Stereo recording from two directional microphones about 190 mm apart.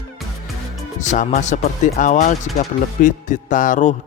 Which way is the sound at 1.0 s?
40° left (ahead or behind).